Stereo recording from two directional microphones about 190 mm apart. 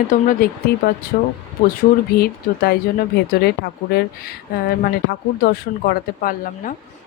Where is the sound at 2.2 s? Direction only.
55° left (ahead or behind).